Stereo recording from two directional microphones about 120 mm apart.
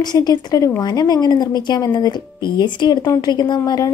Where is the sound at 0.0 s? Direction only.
35° left (ahead or behind).